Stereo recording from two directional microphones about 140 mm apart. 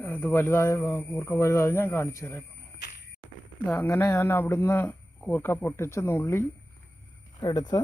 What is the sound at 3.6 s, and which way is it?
Speech, 10° left (ahead or behind).